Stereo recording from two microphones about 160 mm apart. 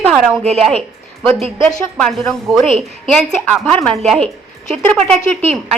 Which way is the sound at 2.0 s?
Centre (ahead or behind).